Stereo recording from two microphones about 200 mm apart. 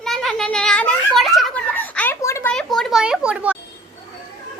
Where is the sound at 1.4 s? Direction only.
5° left (ahead or behind).